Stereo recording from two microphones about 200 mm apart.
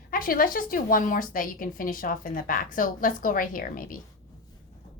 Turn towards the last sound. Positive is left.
turn(degrees=45)  # may be behind; listen again after turning